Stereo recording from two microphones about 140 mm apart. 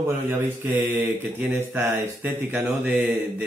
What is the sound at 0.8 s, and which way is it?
A man's voice, 15° right (ahead or behind).